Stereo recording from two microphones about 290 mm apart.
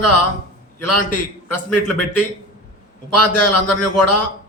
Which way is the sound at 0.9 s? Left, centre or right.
Left.